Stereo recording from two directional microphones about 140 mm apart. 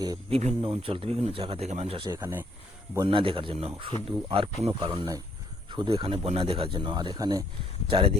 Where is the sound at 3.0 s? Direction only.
40° right (ahead or behind).